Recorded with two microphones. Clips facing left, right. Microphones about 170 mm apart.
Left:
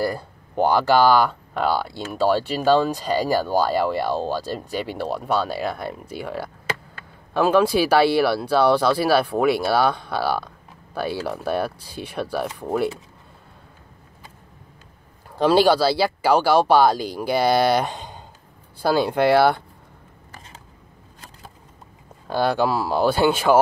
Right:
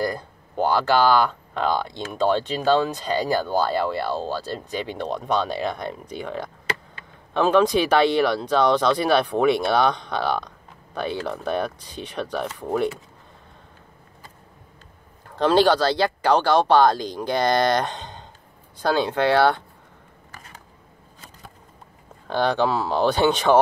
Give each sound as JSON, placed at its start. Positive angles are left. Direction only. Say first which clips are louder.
{"t": 0.0, "sound": "speech", "louder": "left 1 dB", "side_deg": 10}
{"t": 15.2, "sound": "speech", "louder": "left 1 dB", "side_deg": 10}
{"t": 20.2, "sound": "a sound", "louder": "left 1 dB", "side_deg": 25}
{"t": 22.3, "sound": "speech", "louder": "left 1 dB", "side_deg": 10}